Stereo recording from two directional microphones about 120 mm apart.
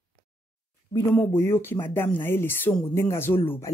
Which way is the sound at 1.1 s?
15° left (ahead or behind).